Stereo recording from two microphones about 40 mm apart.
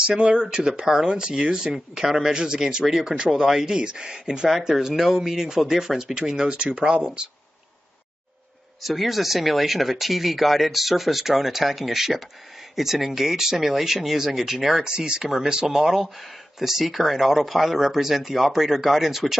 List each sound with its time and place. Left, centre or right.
0.1 s speech: right
1.7 s speech: centre
6.5 s speech: right
8.8 s speech: centre
15.2 s speech: centre